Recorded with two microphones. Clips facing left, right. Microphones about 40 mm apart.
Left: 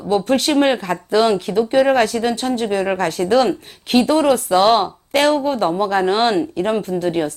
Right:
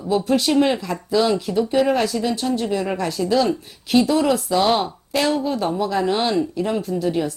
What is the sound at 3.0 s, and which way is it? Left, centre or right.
Speech, left.